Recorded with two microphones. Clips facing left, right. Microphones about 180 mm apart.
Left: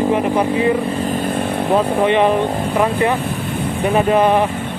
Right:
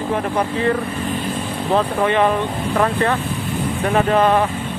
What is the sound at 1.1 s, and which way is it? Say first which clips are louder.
Chainsaw: left 5 dB; 55° left (ahead or behind).